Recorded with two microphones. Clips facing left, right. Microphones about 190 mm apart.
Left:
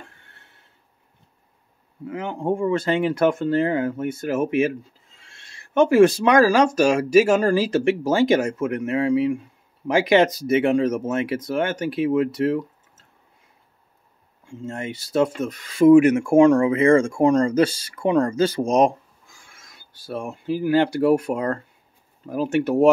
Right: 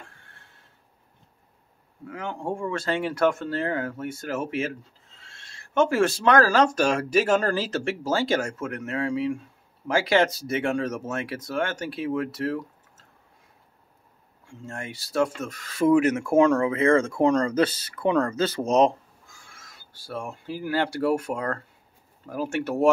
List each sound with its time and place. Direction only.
2.0 s speech: 20° left (ahead or behind)
14.7 s speech: 20° left (ahead or behind)